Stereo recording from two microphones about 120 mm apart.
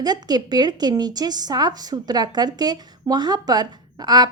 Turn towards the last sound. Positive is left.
turn(degrees=-35)  # may be behind; listen again after turning